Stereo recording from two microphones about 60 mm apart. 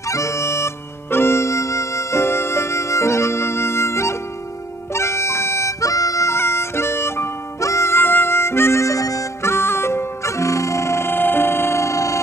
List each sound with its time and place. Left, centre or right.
0.1 s music: left
4.9 s harmonica: left
6.3 s music: left
9.4 s music: left
11.1 s music: left